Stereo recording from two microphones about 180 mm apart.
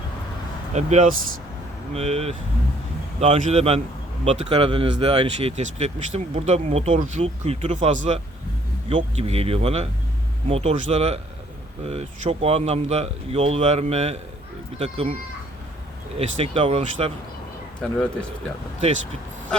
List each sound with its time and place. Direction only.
0.7 s speech: 40° right (ahead or behind)
16.1 s speech: 35° right (ahead or behind)
17.7 s speech: 5° left (ahead or behind)